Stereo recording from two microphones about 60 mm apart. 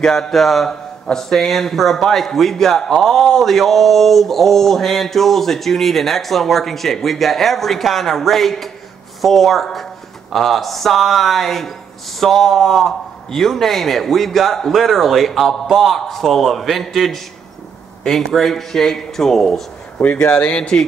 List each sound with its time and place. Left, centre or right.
0.0 s speech: centre
20.0 s speech: left